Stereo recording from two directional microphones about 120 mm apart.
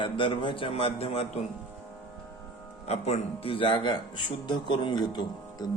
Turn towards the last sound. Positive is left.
turn(degrees=35)  # may be behind; listen again after turning